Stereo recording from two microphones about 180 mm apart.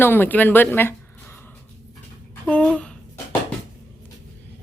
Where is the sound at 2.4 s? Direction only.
5° left (ahead or behind).